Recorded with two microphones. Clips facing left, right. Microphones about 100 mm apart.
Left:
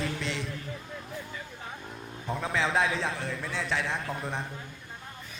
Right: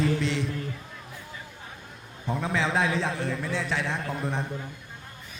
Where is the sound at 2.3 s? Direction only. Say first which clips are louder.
Right 2 dB; centre (ahead or behind).